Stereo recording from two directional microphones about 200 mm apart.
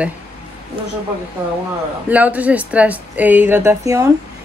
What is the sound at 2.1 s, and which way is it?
Speech, 5° right (ahead or behind).